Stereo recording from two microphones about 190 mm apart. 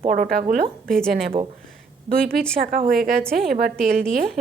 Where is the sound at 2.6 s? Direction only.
50° right (ahead or behind).